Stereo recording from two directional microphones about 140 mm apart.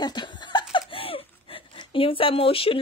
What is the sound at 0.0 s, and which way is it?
Laughter, 30° left (ahead or behind).